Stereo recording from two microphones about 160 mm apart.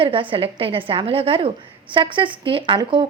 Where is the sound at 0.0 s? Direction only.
35° right (ahead or behind).